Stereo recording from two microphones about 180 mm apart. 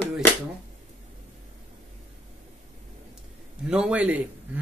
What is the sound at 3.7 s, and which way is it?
Speech, 5° right (ahead or behind).